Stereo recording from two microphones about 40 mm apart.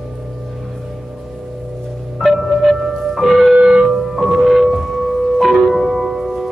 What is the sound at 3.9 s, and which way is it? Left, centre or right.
Music, centre.